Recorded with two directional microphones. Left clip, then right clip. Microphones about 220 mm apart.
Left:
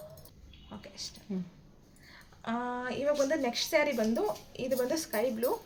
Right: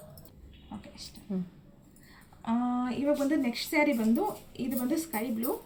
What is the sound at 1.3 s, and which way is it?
Speech, centre (ahead or behind).